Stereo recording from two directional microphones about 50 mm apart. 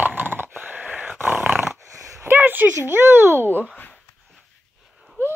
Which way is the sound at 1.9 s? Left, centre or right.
Right.